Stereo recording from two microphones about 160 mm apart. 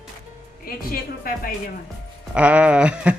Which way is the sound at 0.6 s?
65° left (ahead or behind).